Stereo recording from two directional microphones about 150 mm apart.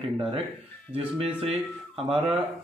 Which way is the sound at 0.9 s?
40° right (ahead or behind).